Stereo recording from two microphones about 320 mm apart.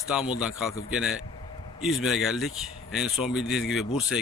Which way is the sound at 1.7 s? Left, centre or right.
Centre.